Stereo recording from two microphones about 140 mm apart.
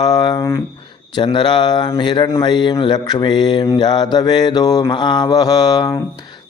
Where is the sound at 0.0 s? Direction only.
30° left (ahead or behind).